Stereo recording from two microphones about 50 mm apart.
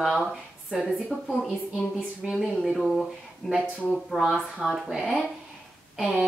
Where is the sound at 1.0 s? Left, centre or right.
Centre.